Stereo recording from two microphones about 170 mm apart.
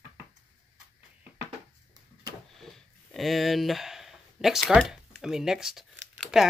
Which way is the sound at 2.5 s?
Centre (ahead or behind).